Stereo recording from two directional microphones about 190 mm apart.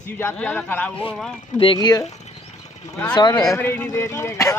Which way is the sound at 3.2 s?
20° left (ahead or behind).